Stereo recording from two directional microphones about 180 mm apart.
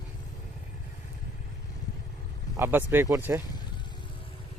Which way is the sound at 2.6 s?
10° right (ahead or behind).